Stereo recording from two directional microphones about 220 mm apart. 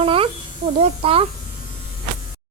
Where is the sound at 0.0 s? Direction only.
25° right (ahead or behind).